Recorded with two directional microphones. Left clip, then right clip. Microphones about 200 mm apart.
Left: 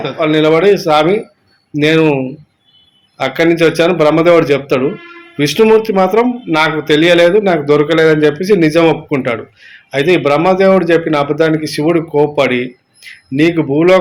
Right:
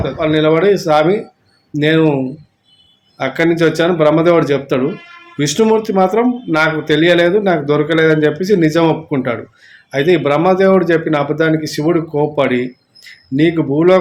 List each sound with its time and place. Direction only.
0.0 s a man's voice: 15° right (ahead or behind)
3.2 s a man's voice: 15° right (ahead or behind)